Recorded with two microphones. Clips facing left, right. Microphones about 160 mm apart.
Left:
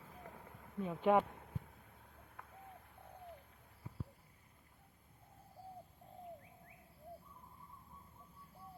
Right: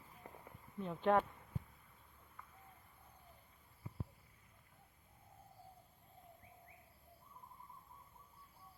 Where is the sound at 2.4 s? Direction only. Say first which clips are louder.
Left 3 dB; 75° left (ahead or behind).